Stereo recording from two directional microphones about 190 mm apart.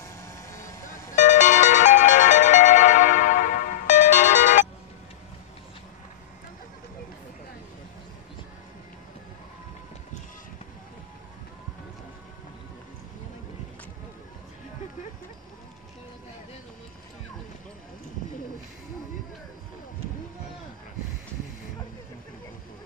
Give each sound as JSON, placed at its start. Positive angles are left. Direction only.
{"t": 0.2, "sound": "vehicle", "side_deg": 15}
{"t": 1.1, "sound": "music", "side_deg": 40}